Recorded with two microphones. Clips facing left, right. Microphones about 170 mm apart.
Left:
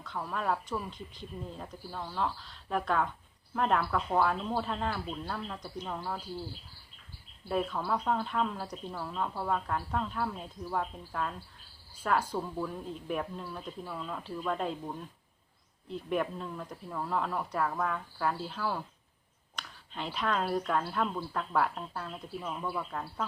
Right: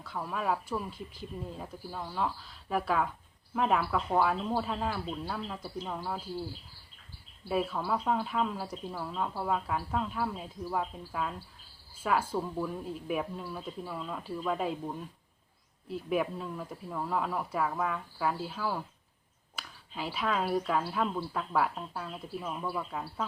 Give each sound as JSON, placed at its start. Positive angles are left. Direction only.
{"t": 0.0, "sound": "speech", "side_deg": -5}
{"t": 7.4, "sound": "speech", "side_deg": -5}